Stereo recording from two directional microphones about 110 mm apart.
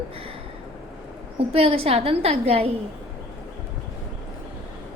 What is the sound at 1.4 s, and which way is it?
A woman's voice, 65° right (ahead or behind).